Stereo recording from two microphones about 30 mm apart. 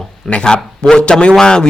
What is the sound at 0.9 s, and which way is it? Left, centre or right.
Speech, left.